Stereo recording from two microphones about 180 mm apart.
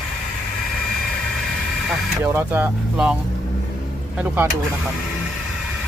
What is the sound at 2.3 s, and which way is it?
Speech, 10° right (ahead or behind).